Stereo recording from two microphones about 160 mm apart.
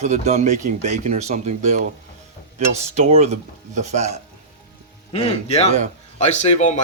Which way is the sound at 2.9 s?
40° right (ahead or behind).